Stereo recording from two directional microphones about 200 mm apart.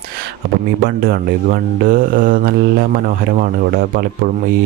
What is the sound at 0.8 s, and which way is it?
Speech, 45° right (ahead or behind).